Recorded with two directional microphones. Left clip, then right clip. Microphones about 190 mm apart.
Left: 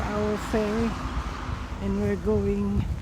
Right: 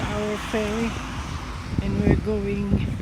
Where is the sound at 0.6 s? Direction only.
45° right (ahead or behind).